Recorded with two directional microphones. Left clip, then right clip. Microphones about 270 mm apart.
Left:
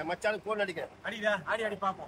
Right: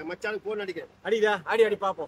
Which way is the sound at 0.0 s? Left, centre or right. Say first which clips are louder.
Even; centre.